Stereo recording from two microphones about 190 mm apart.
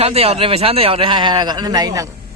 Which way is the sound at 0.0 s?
30° right (ahead or behind).